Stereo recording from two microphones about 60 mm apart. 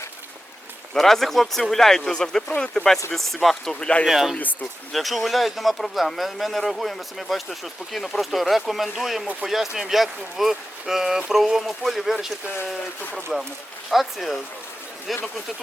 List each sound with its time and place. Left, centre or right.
0.9 s speech: centre
3.8 s speech: centre
4.0 s speech: centre
13.3 s speech: centre